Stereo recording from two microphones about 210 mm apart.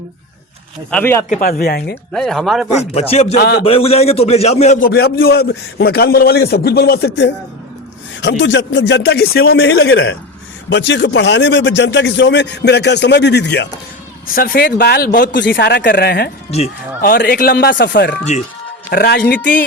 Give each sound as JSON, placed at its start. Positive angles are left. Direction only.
{"t": 0.9, "sound": "speech", "side_deg": 10}
{"t": 1.3, "sound": "a man's voice", "side_deg": 40}
{"t": 2.1, "sound": "speech", "side_deg": 0}
{"t": 2.9, "sound": "speech", "side_deg": 30}
{"t": 3.3, "sound": "a man's voice", "side_deg": 55}
{"t": 3.6, "sound": "a man's voice", "side_deg": 30}
{"t": 4.9, "sound": "a man's voice", "side_deg": 50}
{"t": 10.7, "sound": "a man's voice", "side_deg": 55}
{"t": 15.4, "sound": "a man's voice", "side_deg": 55}
{"t": 16.5, "sound": "a man's voice", "side_deg": 30}
{"t": 17.1, "sound": "a man's voice", "side_deg": 50}